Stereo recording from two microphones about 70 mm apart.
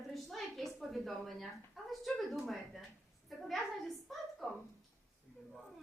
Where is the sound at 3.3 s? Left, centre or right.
Centre.